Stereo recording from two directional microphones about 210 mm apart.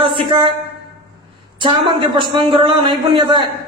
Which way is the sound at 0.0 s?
25° right (ahead or behind).